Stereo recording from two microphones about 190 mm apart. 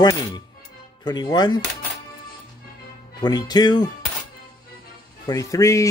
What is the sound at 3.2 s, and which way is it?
Speech, 20° left (ahead or behind).